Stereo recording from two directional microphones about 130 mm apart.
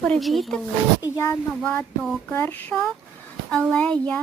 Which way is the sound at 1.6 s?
10° left (ahead or behind).